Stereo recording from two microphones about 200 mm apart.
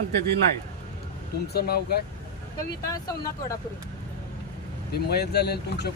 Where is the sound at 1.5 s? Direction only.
50° left (ahead or behind).